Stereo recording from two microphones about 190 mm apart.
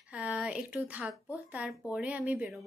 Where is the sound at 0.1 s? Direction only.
5° right (ahead or behind).